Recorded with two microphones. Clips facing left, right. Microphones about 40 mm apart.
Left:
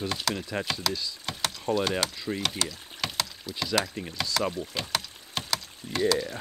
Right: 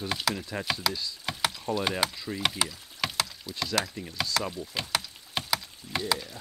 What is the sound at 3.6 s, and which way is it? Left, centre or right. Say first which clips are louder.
Speech: left 2 dB; centre.